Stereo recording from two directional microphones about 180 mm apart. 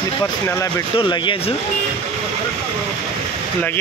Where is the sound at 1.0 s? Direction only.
25° left (ahead or behind).